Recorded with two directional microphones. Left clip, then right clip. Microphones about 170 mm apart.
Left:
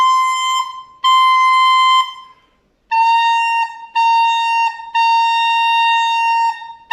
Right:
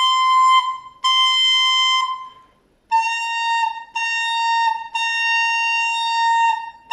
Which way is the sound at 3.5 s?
Centre (ahead or behind).